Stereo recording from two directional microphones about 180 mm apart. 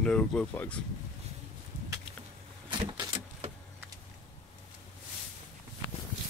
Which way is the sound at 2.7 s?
30° right (ahead or behind).